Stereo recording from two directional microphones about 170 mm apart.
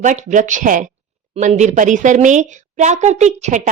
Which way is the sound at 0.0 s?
45° right (ahead or behind).